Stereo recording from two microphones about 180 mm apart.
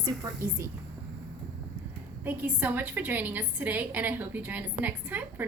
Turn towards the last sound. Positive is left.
turn(degrees=-10)  # may be behind; listen again after turning